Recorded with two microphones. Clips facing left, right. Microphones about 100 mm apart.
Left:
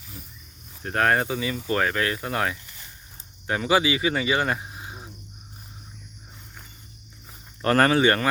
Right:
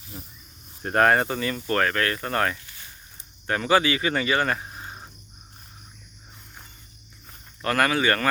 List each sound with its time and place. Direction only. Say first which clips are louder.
0.9 s speech: right 2 dB; centre (ahead or behind)
7.6 s speech: left 4 dB; 30° left (ahead or behind)